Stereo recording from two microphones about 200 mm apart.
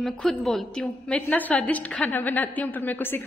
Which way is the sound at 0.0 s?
Centre (ahead or behind).